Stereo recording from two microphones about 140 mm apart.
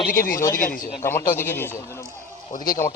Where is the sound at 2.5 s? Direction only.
85° left.